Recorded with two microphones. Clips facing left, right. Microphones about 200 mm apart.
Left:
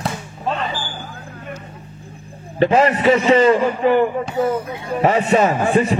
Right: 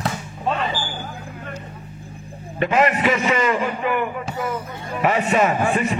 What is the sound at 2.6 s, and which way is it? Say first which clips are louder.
A man's voice: left 4 dB; 30° left (ahead or behind).